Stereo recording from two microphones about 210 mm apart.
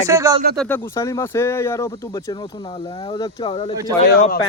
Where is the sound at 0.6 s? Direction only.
10° left (ahead or behind).